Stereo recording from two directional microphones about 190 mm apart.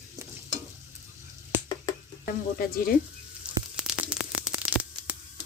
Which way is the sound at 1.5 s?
10° right (ahead or behind).